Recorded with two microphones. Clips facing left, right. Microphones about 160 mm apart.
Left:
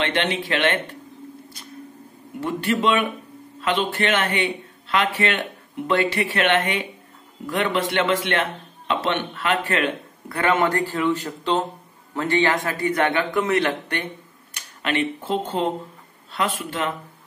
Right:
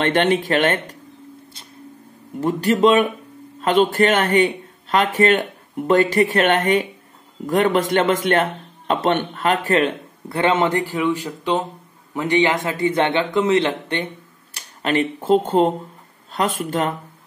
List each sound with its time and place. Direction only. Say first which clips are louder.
0.0 s a man's voice: right 6 dB; 50° right (ahead or behind)
2.4 s a man's voice: right 6 dB; 40° right (ahead or behind); by 14.0 s 25° right (ahead or behind)
14.5 s a man's voice: right 4 dB; 35° right (ahead or behind)